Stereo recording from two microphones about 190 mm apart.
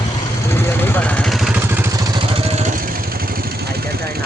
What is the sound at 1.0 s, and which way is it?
Vehicle, 5° left (ahead or behind).